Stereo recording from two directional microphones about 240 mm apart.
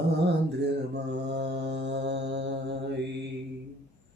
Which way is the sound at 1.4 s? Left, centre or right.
Right.